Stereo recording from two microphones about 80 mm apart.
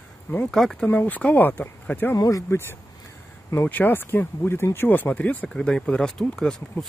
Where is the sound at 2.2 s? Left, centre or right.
Left.